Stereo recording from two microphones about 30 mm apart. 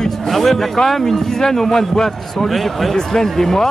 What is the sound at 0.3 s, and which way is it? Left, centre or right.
Speech, centre.